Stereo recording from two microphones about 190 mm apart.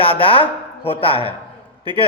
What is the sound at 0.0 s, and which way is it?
Speech, 30° left (ahead or behind).